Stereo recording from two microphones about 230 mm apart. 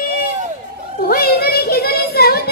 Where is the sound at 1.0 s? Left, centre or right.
Left.